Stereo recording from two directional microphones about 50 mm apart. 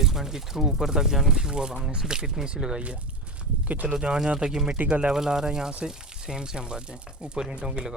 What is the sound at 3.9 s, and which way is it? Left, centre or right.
Speech, centre.